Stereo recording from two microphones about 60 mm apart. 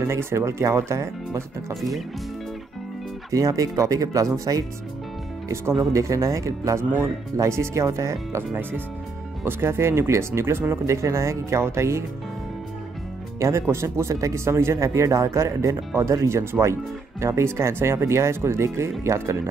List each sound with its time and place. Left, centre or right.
0.0 s speech: right
1.7 s speech: centre
3.3 s speech: right
5.8 s speech: right
9.4 s speech: right
13.4 s speech: right